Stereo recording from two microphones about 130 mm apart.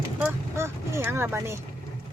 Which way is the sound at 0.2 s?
20° right (ahead or behind).